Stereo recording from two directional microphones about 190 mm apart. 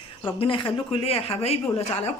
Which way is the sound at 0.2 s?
25° left (ahead or behind).